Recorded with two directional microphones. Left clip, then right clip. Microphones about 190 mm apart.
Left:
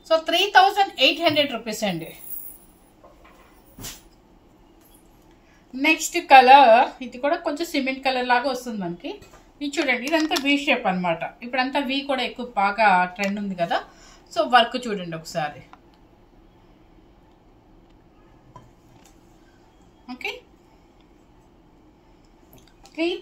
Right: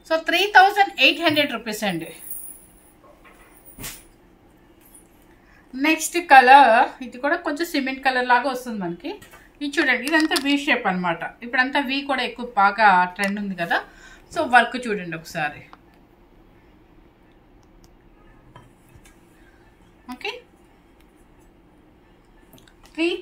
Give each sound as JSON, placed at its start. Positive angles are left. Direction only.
{"t": 0.0, "sound": "a woman's voice", "side_deg": 15}
{"t": 5.9, "sound": "a woman's voice", "side_deg": 15}
{"t": 15.1, "sound": "speech", "side_deg": 5}
{"t": 20.1, "sound": "a woman's voice", "side_deg": 25}